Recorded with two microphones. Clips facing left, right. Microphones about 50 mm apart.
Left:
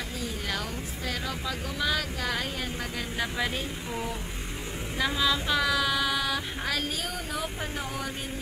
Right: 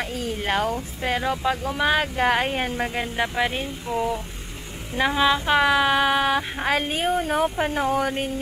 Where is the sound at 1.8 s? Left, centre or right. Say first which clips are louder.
Right 8 dB; right.